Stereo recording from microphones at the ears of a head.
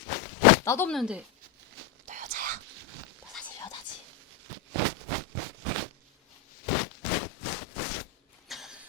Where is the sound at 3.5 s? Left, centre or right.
Left.